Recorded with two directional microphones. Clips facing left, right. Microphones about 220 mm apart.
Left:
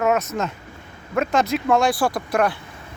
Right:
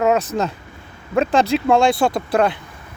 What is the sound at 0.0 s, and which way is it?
Speech, 30° right (ahead or behind).